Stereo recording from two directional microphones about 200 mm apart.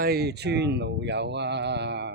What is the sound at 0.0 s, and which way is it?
Speech, 55° right (ahead or behind).